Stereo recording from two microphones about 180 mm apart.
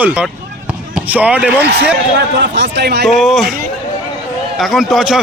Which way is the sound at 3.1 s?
Centre (ahead or behind).